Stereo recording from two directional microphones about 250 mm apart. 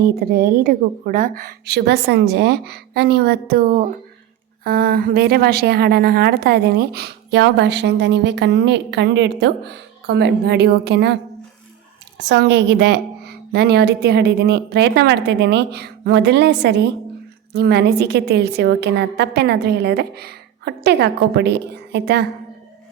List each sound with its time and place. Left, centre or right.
0.0 s a woman's voice: right
12.3 s a woman's voice: right